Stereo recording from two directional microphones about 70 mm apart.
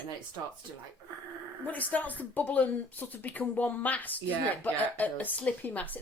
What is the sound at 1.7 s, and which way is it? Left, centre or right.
Speech, left.